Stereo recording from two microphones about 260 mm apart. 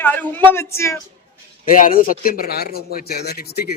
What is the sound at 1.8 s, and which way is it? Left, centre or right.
Speech, left.